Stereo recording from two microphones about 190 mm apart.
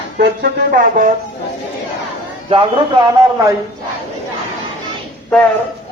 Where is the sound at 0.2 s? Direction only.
50° right (ahead or behind).